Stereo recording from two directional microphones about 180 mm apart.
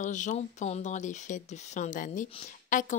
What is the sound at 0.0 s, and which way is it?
Speech, 45° left (ahead or behind).